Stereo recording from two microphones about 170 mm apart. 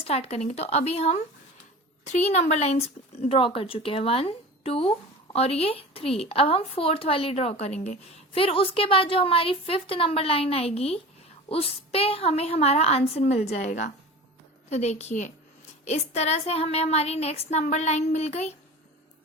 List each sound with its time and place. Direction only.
0.0 s a woman's voice: 40° left (ahead or behind)